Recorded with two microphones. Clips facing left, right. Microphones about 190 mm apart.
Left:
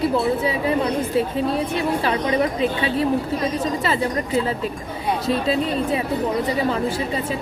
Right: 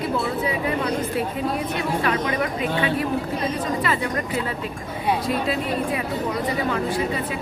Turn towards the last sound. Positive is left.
turn(degrees=25)  # may be behind; listen again after turning